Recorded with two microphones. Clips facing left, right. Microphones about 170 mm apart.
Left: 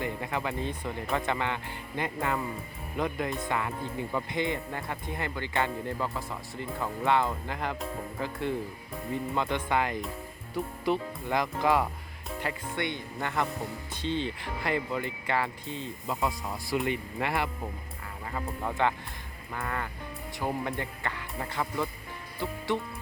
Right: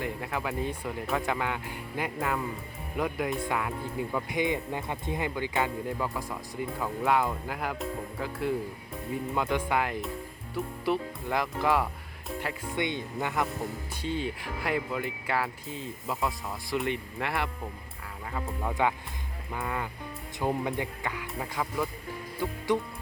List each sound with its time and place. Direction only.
0.0 s speech: centre (ahead or behind)
12.7 s speech: 20° right (ahead or behind)